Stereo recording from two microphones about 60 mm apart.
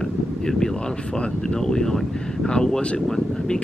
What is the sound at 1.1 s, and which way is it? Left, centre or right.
Speech, centre.